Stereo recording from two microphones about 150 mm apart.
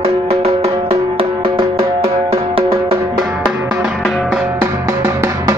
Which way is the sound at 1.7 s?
40° right (ahead or behind).